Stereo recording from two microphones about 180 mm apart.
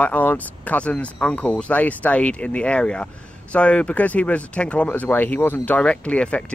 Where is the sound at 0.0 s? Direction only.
10° left (ahead or behind).